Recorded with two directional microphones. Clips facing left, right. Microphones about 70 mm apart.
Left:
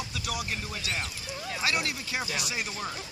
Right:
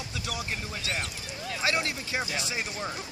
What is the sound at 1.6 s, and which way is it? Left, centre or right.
Speech, right.